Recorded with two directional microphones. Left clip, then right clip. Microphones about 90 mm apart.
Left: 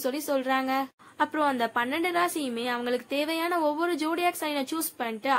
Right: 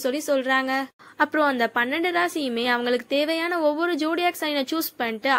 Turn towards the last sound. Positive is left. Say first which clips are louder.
# right 4 dB
turn(degrees=-45)  # may be behind; listen again after turning